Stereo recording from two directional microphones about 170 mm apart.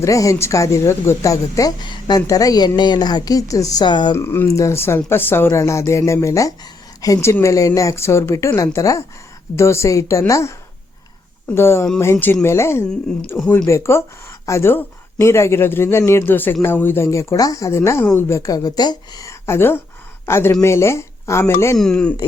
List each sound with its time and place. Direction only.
0.0 s speech: 20° left (ahead or behind)
4.1 s speech: 15° left (ahead or behind)
11.5 s speech: 15° left (ahead or behind)
13.7 s speech: 15° left (ahead or behind)
21.8 s speech: 5° left (ahead or behind)